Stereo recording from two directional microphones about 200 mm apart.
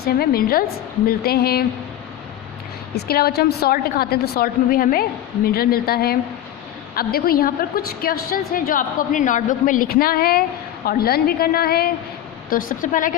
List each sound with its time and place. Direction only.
0.0 s a woman's voice: 50° left (ahead or behind)
2.9 s a woman's voice: 50° left (ahead or behind)